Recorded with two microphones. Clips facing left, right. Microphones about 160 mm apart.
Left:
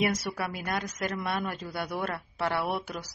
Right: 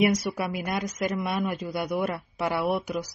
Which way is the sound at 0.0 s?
15° right (ahead or behind).